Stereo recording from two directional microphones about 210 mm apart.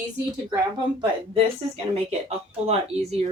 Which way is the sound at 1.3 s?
30° right (ahead or behind).